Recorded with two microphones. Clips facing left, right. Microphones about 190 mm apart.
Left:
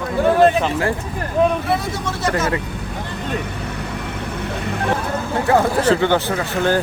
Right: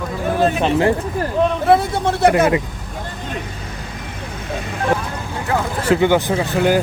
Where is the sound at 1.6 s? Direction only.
55° right (ahead or behind).